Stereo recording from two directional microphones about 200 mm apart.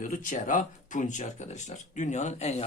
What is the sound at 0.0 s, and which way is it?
A man's voice, 40° left (ahead or behind).